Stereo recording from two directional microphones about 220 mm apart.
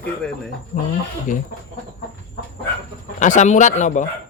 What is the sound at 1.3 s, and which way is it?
Speech, 35° left (ahead or behind).